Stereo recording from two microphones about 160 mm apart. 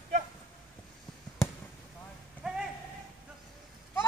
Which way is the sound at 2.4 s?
5° right (ahead or behind).